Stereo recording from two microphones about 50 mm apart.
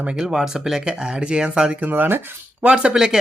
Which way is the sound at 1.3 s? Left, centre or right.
Centre.